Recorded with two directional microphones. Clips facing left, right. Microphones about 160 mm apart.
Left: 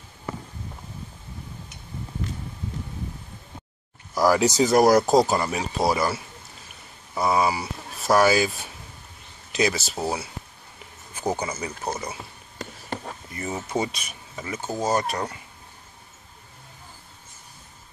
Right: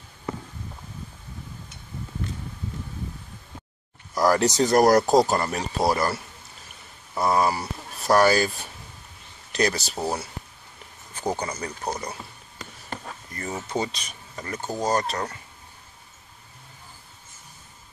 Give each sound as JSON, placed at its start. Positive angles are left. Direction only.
{"t": 4.1, "sound": "speech", "side_deg": 5}
{"t": 12.9, "sound": "a sound", "side_deg": 25}
{"t": 13.3, "sound": "speech", "side_deg": 10}